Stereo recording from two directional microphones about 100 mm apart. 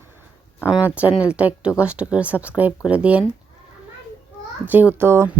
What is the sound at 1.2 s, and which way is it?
Speech, 10° right (ahead or behind).